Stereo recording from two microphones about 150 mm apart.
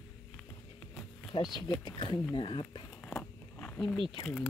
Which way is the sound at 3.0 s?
10° left (ahead or behind).